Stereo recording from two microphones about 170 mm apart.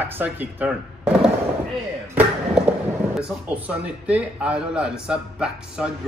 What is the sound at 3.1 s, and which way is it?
A man's voice, 10° right (ahead or behind).